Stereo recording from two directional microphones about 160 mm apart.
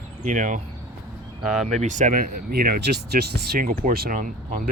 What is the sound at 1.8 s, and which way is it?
Speech, 50° right (ahead or behind).